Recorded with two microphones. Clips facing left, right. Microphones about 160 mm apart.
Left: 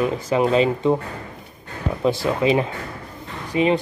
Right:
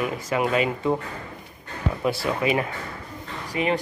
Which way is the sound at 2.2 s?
25° left (ahead or behind).